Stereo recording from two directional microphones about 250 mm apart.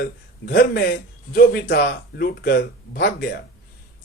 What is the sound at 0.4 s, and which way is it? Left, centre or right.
A man's voice, left.